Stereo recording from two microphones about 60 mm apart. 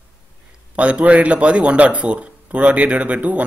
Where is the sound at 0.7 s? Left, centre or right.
Right.